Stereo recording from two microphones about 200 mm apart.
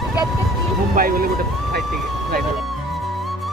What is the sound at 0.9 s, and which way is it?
Speech, 45° right (ahead or behind).